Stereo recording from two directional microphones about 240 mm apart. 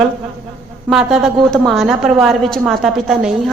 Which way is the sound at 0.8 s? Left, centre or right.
Centre.